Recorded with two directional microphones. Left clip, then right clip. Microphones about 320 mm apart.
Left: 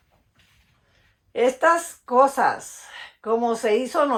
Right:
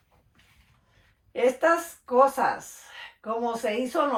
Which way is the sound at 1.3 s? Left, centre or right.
Left.